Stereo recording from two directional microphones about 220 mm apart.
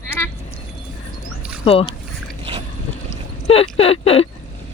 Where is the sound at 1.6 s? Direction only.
25° left (ahead or behind).